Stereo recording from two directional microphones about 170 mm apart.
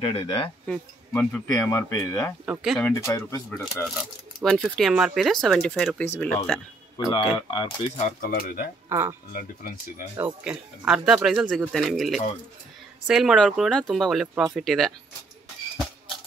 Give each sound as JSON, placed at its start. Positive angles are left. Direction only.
{"t": 0.0, "sound": "speech", "side_deg": 35}
{"t": 0.7, "sound": "speech", "side_deg": 10}
{"t": 2.4, "sound": "speech", "side_deg": -5}
{"t": 2.9, "sound": "speech", "side_deg": 15}
{"t": 4.0, "sound": "speech", "side_deg": 0}
{"t": 6.0, "sound": "speech", "side_deg": 15}
{"t": 7.1, "sound": "speech", "side_deg": 30}
{"t": 8.0, "sound": "speech", "side_deg": 55}
{"t": 8.8, "sound": "speech", "side_deg": -15}
{"t": 9.3, "sound": "speech", "side_deg": 55}
{"t": 10.1, "sound": "speech", "side_deg": -10}